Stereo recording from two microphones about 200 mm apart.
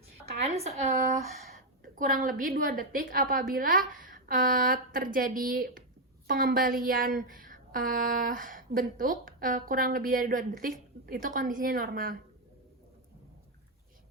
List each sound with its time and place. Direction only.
0.4 s a woman's voice: 30° right (ahead or behind)